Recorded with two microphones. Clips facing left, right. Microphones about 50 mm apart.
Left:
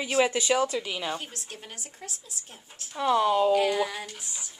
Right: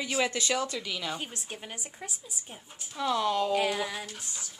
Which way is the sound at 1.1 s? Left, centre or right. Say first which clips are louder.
Even; centre.